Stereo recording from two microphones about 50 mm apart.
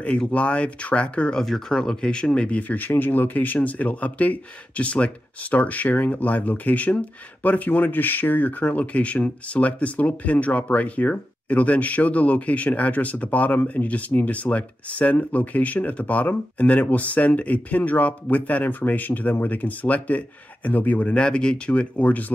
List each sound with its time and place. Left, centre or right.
0.3 s speech: left
1.4 s speech: centre; by 22.2 s left